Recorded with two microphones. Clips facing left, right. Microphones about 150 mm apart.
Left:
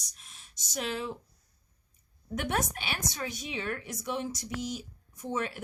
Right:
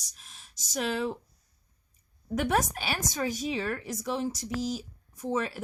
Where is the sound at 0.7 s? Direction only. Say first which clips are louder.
Right 4 dB; 45° right (ahead or behind).